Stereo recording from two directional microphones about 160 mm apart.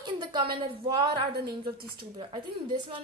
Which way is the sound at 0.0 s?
30° right (ahead or behind).